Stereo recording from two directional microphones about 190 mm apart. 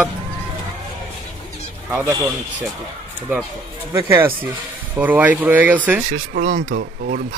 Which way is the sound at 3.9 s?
15° right (ahead or behind).